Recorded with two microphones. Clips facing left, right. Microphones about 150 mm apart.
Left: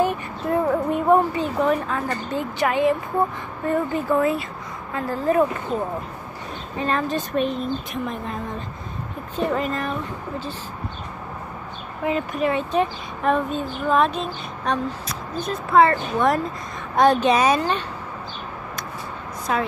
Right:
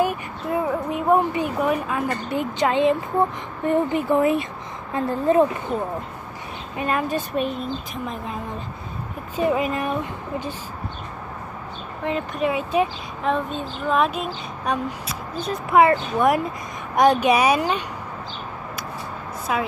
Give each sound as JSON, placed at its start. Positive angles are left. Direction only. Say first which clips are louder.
{"t": 0.0, "sound": "a sound", "louder": "left 1 dB", "side_deg": -5}
{"t": 1.3, "sound": "speech", "louder": "left 1 dB", "side_deg": -10}
{"t": 6.8, "sound": "speech", "louder": "even", "side_deg": -10}
{"t": 9.4, "sound": "speech", "louder": "right 2 dB", "side_deg": -10}
{"t": 12.0, "sound": "speech", "louder": "left 1 dB", "side_deg": 0}
{"t": 19.5, "sound": "speech", "louder": "left 1 dB", "side_deg": -5}